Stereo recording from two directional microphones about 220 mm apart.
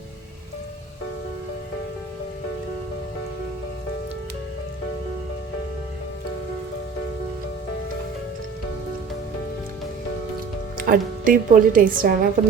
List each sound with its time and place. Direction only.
10.8 s a woman's voice: 40° right (ahead or behind)